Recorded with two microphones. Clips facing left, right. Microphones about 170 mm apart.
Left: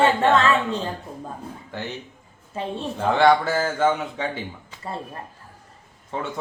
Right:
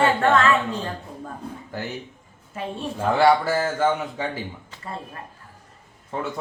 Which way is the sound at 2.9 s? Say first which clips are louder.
Even; 5° right (ahead or behind).